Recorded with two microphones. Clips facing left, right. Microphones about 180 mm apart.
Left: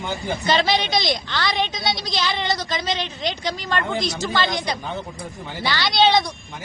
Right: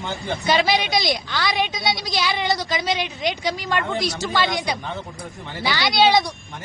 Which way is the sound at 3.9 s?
20° left (ahead or behind).